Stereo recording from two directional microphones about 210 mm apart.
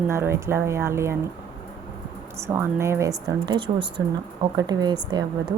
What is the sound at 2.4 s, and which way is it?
A woman's voice, 10° right (ahead or behind).